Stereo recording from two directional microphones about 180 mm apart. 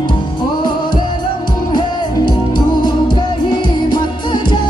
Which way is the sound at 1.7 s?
25° left (ahead or behind).